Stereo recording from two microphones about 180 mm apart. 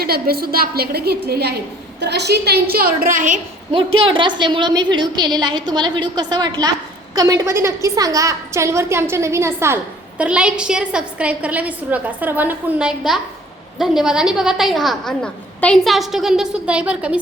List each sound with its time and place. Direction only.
0.0 s a woman's voice: 55° right (ahead or behind)
3.9 s a woman's voice: 30° right (ahead or behind); by 17.2 s 5° right (ahead or behind)